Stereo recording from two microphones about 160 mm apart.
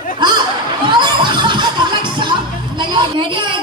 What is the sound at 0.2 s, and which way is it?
Chatter, 25° right (ahead or behind).